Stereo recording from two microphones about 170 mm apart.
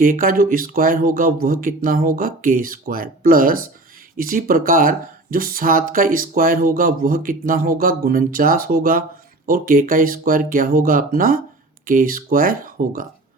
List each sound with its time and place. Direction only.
0.0 s speech: 55° right (ahead or behind)